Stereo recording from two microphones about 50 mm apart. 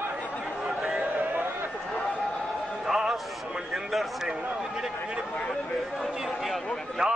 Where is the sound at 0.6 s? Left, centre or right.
Centre.